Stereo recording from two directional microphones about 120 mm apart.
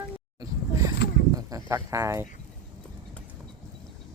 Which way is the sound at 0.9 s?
30° right (ahead or behind).